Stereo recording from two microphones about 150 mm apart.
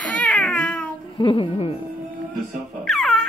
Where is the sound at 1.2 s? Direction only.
35° left (ahead or behind).